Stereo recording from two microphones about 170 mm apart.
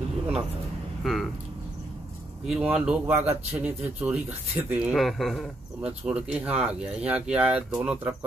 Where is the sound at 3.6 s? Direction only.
10° right (ahead or behind).